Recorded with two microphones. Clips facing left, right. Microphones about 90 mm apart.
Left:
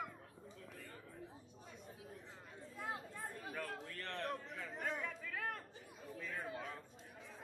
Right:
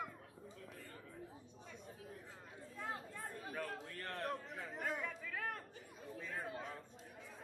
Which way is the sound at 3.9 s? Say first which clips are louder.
Even; 40° right (ahead or behind).